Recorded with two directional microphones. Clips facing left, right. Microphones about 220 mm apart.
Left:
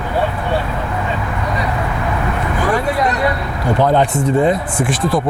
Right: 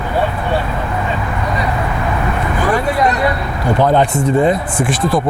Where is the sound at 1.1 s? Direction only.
20° right (ahead or behind).